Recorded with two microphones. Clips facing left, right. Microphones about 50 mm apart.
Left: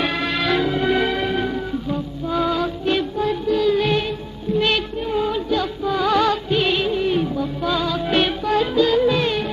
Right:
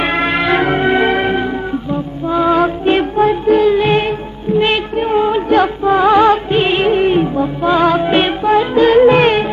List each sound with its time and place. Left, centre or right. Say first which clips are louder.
0.0 s music: right 7 dB; right
1.4 s music: right 5 dB; right
2.5 s music: right 8 dB; right
4.6 s child singing: right 6 dB; right
4.9 s music: right 8 dB; right
8.1 s music: right 7 dB; right
8.7 s music: right 10 dB; right